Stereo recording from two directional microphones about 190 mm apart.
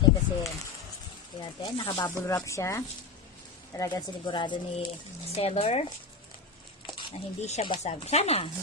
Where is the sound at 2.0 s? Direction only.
15° left (ahead or behind); by 5.8 s 30° left (ahead or behind).